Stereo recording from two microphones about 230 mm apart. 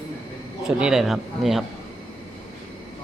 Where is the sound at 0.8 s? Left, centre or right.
Centre.